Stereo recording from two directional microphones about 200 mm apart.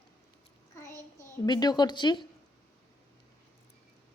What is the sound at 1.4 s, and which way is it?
Speech, 20° left (ahead or behind).